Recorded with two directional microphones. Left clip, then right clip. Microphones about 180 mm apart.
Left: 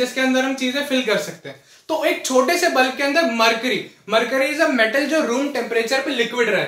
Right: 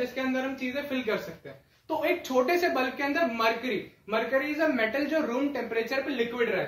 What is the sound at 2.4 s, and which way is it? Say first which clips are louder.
Speech: left 9 dB; 15° right (ahead or behind).